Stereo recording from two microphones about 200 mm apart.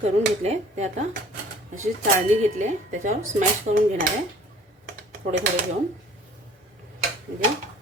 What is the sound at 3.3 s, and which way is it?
Speech, 40° right (ahead or behind).